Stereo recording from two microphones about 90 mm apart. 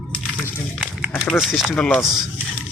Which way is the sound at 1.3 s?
Centre (ahead or behind).